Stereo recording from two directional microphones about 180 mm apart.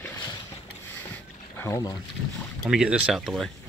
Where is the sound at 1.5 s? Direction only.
15° left (ahead or behind).